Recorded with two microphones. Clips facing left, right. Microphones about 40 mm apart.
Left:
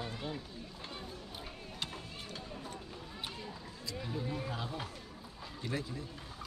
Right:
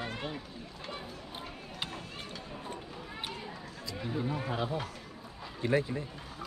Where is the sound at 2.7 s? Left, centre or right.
Right.